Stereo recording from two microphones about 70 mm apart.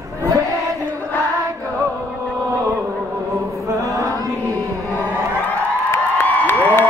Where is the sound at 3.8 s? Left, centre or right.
Right.